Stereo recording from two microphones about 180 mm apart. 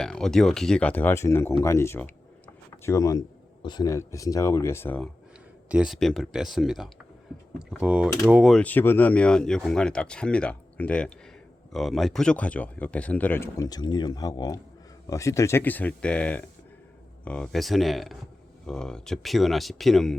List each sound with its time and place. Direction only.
0.0 s speech: 5° left (ahead or behind)
5.6 s speech: 5° right (ahead or behind)
8.5 s speech: 10° left (ahead or behind)